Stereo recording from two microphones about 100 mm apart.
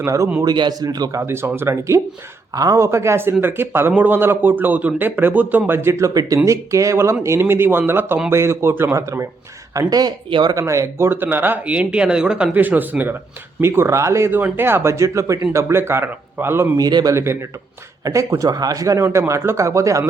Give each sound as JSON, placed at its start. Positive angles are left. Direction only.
{"t": 0.0, "sound": "a man's voice", "side_deg": -30}
{"t": 0.4, "sound": "a man's voice", "side_deg": -45}
{"t": 1.3, "sound": "a man's voice", "side_deg": -25}
{"t": 9.7, "sound": "speech", "side_deg": -40}
{"t": 10.5, "sound": "a man's voice", "side_deg": -30}
{"t": 16.7, "sound": "a man's voice", "side_deg": -40}